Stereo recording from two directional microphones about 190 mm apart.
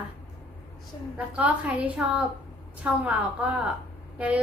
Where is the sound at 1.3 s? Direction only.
5° right (ahead or behind).